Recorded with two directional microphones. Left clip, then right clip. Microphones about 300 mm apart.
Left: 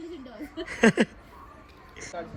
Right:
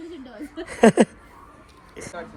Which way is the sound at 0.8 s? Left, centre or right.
Centre.